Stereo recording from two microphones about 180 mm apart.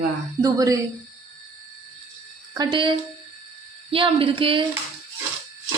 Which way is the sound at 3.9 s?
30° right (ahead or behind).